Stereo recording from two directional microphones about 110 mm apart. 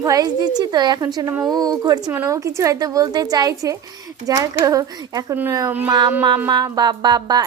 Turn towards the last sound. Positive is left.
turn(degrees=-35)  # may be behind; listen again after turning